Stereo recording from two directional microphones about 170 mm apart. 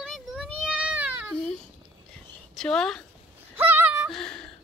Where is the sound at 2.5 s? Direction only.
5° left (ahead or behind).